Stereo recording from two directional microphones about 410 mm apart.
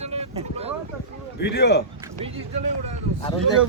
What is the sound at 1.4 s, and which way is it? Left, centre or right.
Speech, left.